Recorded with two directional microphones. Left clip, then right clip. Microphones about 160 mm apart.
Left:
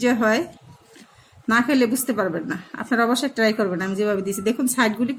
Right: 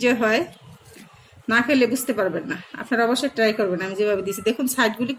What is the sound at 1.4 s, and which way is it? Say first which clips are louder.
A woman's voice: even; 80° left.